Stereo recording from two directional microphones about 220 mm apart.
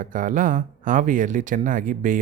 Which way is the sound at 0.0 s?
35° right (ahead or behind).